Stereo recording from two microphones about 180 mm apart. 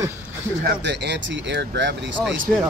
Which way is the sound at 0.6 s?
70° right (ahead or behind).